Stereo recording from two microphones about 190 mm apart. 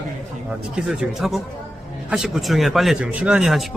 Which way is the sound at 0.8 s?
Centre (ahead or behind).